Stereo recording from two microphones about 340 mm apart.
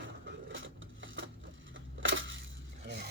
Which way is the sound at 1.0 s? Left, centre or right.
Right.